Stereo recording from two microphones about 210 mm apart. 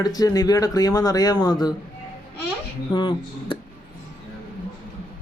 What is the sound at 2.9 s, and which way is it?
Speech, 20° left (ahead or behind).